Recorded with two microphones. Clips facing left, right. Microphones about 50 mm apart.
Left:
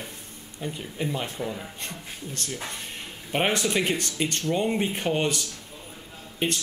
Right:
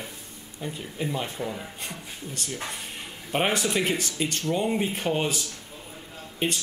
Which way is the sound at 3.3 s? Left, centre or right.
Centre.